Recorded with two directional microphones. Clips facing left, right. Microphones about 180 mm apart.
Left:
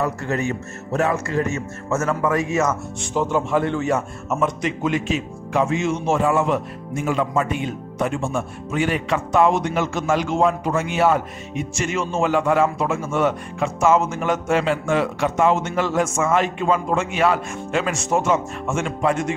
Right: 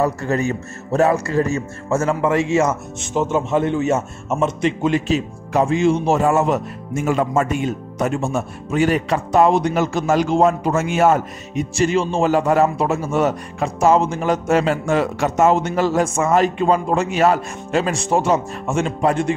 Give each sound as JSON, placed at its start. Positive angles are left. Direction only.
{"t": 0.0, "sound": "speech", "side_deg": -35}